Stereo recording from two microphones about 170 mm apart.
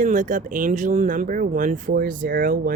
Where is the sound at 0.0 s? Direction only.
50° right (ahead or behind).